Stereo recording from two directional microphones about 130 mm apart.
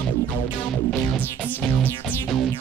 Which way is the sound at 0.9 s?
10° left (ahead or behind).